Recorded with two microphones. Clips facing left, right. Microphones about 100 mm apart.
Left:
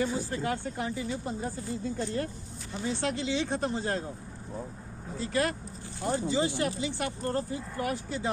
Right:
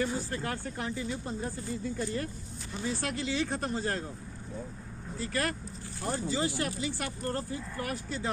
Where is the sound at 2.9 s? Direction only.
25° left (ahead or behind).